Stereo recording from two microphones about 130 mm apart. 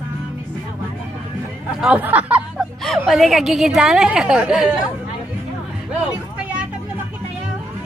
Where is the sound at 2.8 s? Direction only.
Centre (ahead or behind).